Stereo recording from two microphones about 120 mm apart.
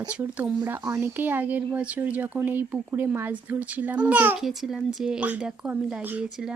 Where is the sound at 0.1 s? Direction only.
10° right (ahead or behind).